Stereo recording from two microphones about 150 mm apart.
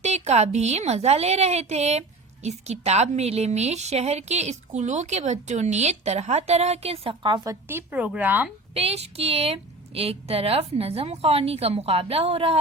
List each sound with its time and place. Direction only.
0.0 s a woman's voice: 45° right (ahead or behind); by 7.5 s 30° right (ahead or behind)
7.7 s speech: 15° right (ahead or behind)
8.7 s a woman's voice: 40° right (ahead or behind)